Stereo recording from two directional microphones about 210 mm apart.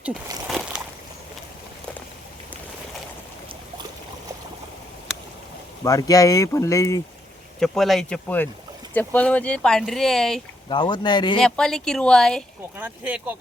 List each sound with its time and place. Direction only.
5.8 s speech: 15° left (ahead or behind)
7.6 s speech: centre (ahead or behind)
10.7 s speech: 20° left (ahead or behind)
11.3 s speech: 5° left (ahead or behind)
12.7 s speech: 10° right (ahead or behind)